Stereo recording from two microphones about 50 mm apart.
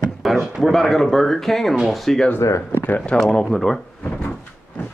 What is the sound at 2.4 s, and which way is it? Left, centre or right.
Speech, left.